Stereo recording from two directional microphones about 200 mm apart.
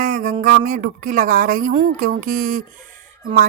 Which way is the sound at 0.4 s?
40° right (ahead or behind).